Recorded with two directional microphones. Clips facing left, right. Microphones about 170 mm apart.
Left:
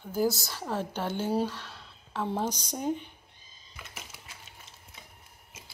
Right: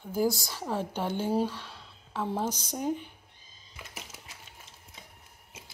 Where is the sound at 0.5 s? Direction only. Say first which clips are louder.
Right 1 dB; 10° right (ahead or behind).